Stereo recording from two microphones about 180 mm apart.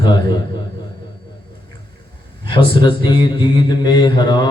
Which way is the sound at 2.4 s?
25° left (ahead or behind).